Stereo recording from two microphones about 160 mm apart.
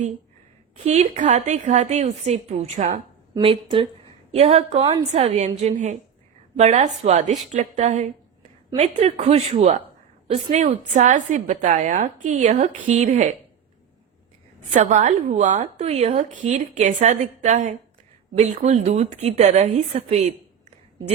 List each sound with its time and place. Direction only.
0.9 s a woman's voice: 50° right (ahead or behind)
3.4 s a woman's voice: 35° right (ahead or behind)
14.7 s a woman's voice: 50° right (ahead or behind)